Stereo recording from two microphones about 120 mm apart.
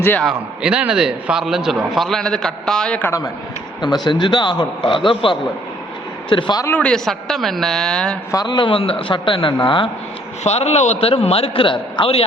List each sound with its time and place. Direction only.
0.6 s a man's voice: 10° right (ahead or behind); by 3.1 s 10° left (ahead or behind)
3.8 s a man's voice: 35° left (ahead or behind)
6.3 s a man's voice: 35° left (ahead or behind)
6.7 s a man's voice: 10° left (ahead or behind)
8.3 s a man's voice: 35° left (ahead or behind)
10.4 s speech: 65° left (ahead or behind)
11.1 s a man's voice: 55° left (ahead or behind)